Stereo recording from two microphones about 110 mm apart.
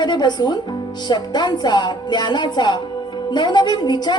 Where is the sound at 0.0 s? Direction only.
40° left (ahead or behind).